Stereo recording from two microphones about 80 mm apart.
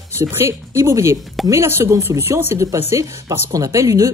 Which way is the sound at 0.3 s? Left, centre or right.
Right.